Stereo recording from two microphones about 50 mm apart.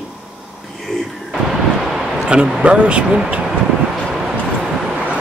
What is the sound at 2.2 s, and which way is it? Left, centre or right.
Speech, centre.